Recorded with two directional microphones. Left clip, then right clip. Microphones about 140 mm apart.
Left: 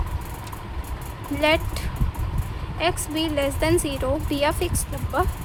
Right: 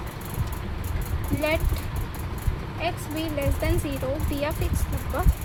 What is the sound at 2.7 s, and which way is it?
Speech, 70° left (ahead or behind).